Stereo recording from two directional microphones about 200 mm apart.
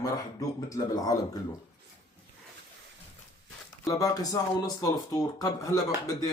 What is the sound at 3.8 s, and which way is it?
Speech, 15° left (ahead or behind).